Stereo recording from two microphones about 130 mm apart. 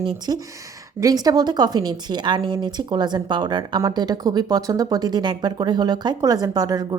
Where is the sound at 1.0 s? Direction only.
30° right (ahead or behind).